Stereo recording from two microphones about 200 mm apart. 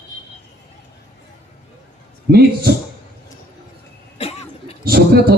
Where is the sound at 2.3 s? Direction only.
50° right (ahead or behind).